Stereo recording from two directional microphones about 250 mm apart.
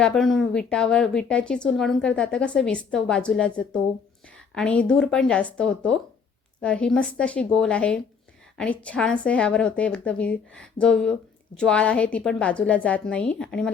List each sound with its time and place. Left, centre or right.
0.0 s a woman's voice: centre